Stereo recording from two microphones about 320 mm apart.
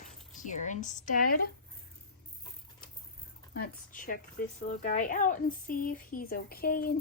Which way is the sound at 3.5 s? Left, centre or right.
Left.